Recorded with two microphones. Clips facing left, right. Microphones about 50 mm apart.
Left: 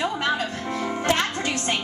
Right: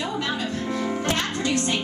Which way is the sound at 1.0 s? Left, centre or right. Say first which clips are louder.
Left 2 dB; left.